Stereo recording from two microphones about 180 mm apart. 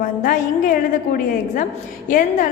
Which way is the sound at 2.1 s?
45° left (ahead or behind).